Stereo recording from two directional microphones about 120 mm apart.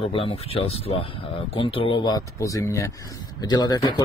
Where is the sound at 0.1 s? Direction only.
50° left (ahead or behind).